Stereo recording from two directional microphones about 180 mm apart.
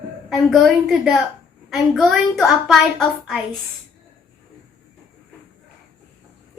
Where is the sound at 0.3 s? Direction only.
Centre (ahead or behind).